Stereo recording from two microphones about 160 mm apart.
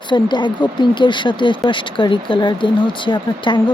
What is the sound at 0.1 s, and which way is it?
Speech, 30° left (ahead or behind).